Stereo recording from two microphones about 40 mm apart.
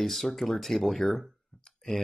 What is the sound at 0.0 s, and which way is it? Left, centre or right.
Speech, centre.